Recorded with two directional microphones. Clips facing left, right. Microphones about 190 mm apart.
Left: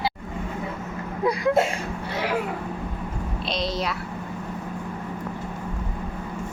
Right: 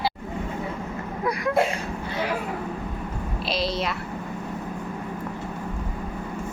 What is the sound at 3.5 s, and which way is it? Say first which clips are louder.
Speech: right 1 dB; centre (ahead or behind).